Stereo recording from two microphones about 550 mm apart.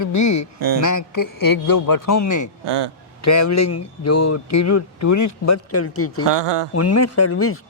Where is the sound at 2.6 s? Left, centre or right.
Right.